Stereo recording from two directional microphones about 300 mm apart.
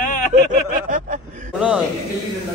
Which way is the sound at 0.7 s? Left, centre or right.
Right.